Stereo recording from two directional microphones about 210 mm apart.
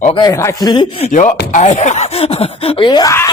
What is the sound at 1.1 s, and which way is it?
Speech, 35° left (ahead or behind).